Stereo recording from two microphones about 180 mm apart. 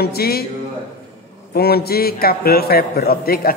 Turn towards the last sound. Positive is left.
turn(degrees=55)  # may be behind; listen again after turning